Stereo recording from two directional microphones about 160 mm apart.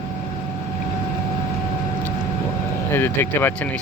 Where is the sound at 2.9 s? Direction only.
15° left (ahead or behind).